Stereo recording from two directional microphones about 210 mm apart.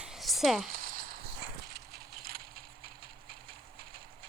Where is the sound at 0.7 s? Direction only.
40° right (ahead or behind).